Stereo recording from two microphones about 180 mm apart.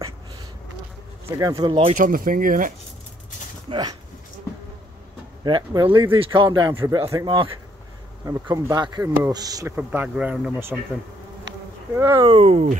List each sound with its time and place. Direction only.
1.4 s speech: 20° right (ahead or behind)
2.0 s speech: 50° right (ahead or behind)
3.7 s speech: 30° right (ahead or behind)
5.4 s speech: 25° right (ahead or behind)
9.8 s speech: 5° right (ahead or behind)
11.9 s speech: 15° right (ahead or behind)
12.3 s speech: 35° right (ahead or behind)